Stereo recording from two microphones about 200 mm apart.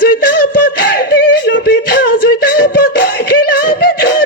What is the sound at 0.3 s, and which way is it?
Beatboxing, 50° left (ahead or behind).